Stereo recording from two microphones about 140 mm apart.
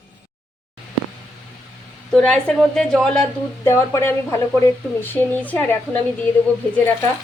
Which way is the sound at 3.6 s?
20° left (ahead or behind).